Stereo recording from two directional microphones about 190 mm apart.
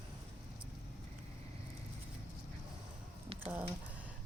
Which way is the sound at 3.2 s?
30° right (ahead or behind).